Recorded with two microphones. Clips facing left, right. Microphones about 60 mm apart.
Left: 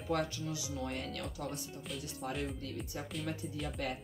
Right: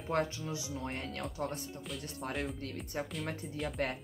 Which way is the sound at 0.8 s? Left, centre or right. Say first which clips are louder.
Even; right.